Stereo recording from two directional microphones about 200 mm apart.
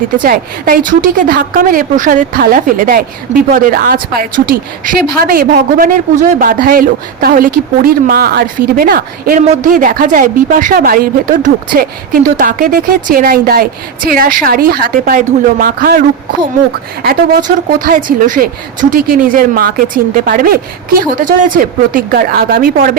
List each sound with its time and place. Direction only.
0.2 s a woman's voice: 45° right (ahead or behind)
17.7 s a woman's voice: 45° right (ahead or behind)